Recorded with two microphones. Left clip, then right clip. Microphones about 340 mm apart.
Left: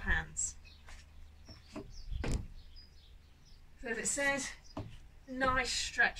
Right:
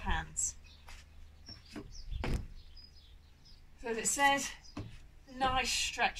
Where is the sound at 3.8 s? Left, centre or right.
Centre.